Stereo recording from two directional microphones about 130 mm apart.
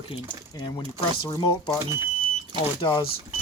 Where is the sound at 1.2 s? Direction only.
30° left (ahead or behind).